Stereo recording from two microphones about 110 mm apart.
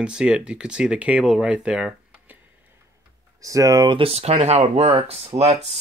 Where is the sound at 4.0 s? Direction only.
65° right (ahead or behind).